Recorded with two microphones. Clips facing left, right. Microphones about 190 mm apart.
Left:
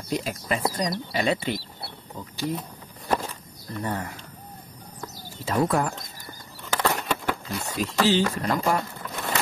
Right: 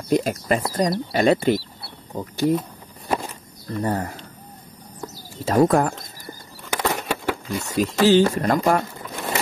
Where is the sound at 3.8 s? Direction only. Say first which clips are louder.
Right 6 dB; 40° right (ahead or behind).